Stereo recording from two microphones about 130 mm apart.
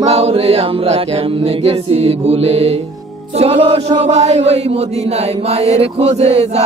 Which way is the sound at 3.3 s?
45° right (ahead or behind).